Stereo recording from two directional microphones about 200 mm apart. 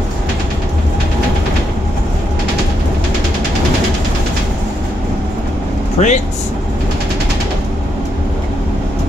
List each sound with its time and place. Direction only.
5.9 s speech: 35° left (ahead or behind)